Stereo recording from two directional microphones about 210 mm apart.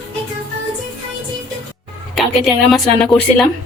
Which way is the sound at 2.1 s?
Centre (ahead or behind).